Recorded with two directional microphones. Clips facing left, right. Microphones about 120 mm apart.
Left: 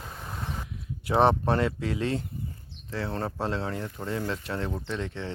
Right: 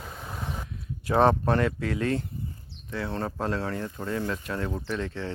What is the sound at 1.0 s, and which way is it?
Speech, 20° left (ahead or behind).